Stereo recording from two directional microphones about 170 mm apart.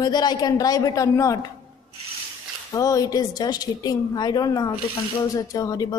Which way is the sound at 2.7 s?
20° left (ahead or behind).